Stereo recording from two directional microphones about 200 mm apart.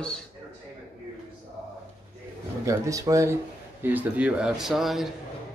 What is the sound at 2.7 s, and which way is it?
A man's voice, 15° right (ahead or behind).